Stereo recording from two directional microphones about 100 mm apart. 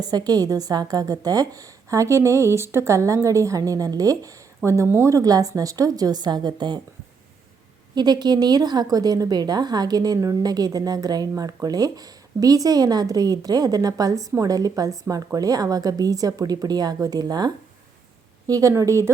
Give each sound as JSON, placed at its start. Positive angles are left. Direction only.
{"t": 0.0, "sound": "a woman's voice", "side_deg": -40}
{"t": 7.9, "sound": "a woman's voice", "side_deg": -45}